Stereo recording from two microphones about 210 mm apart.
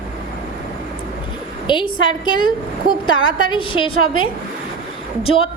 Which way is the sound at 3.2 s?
70° left (ahead or behind).